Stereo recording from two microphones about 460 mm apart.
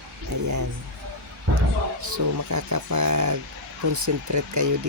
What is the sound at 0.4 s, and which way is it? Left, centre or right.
Speech, right.